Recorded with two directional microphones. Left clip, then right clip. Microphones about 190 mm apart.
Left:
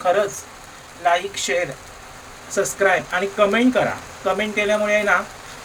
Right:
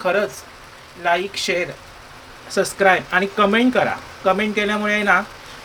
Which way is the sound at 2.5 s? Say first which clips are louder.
Right 2 dB; 40° right (ahead or behind).